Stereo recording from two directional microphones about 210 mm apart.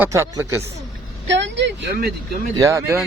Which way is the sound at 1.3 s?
55° right (ahead or behind).